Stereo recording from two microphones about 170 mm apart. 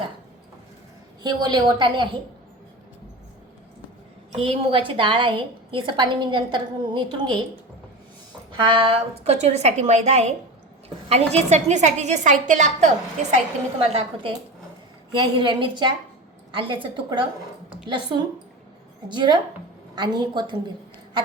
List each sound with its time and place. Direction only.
1.2 s a woman's voice: 25° right (ahead or behind)
4.3 s a woman's voice: 35° right (ahead or behind)
8.6 s a woman's voice: 30° right (ahead or behind)